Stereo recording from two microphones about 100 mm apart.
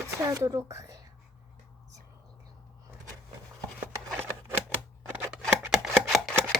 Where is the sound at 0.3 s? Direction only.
35° right (ahead or behind).